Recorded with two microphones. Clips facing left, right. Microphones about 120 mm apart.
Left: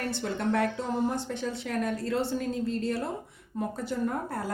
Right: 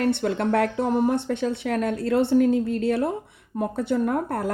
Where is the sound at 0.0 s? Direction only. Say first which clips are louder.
Right 8 dB; 60° right (ahead or behind).